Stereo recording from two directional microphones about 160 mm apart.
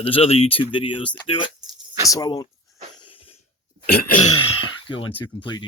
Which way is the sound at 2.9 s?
30° left (ahead or behind).